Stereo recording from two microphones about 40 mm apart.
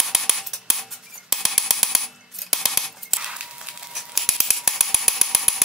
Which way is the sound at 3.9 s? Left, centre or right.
Centre.